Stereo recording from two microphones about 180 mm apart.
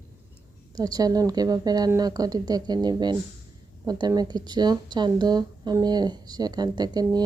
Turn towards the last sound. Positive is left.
turn(degrees=-20)  # may be behind; listen again after turning